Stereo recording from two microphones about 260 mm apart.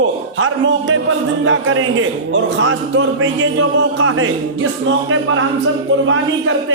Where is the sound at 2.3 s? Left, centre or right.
Right.